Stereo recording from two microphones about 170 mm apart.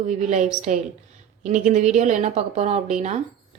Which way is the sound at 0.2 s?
45° right (ahead or behind).